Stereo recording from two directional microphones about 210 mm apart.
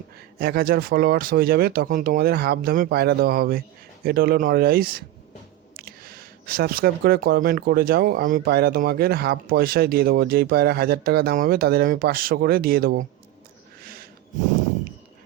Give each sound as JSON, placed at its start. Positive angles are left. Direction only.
{"t": 0.3, "sound": "speech", "side_deg": -45}
{"t": 13.8, "sound": "snort", "side_deg": -45}